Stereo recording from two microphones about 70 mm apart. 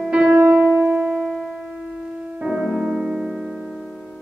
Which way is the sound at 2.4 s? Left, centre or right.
Centre.